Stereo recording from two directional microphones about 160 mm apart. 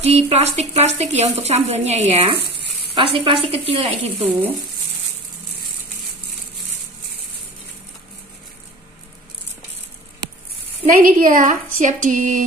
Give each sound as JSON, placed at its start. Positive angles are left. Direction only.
{"t": 0.0, "sound": "speech", "side_deg": -40}
{"t": 4.2, "sound": "speech", "side_deg": -10}
{"t": 10.9, "sound": "a woman's voice", "side_deg": -60}